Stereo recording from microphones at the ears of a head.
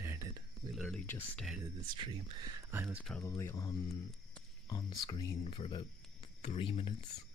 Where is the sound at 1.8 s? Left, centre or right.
Right.